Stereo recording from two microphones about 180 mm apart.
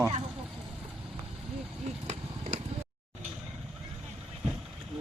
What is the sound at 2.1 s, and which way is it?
Vehicle, 40° right (ahead or behind).